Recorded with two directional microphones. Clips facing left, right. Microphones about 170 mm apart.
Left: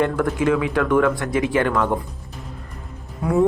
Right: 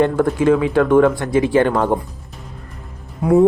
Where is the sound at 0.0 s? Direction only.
30° right (ahead or behind).